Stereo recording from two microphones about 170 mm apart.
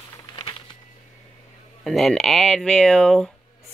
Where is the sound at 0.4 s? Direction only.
30° left (ahead or behind).